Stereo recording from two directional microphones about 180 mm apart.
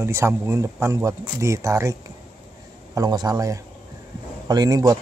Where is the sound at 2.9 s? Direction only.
20° right (ahead or behind).